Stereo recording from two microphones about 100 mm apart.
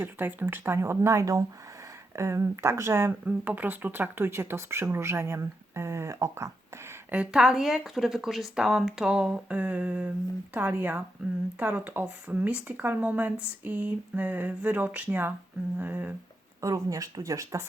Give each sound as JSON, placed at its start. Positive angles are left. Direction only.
{"t": 0.0, "sound": "speech", "side_deg": -20}
{"t": 7.3, "sound": "speech", "side_deg": -5}
{"t": 16.6, "sound": "speech", "side_deg": -35}